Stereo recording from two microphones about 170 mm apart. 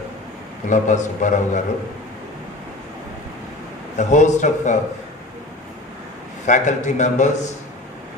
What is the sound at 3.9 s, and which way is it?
Speech, 45° left (ahead or behind).